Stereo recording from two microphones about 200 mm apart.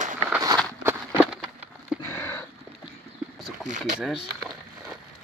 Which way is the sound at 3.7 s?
35° right (ahead or behind).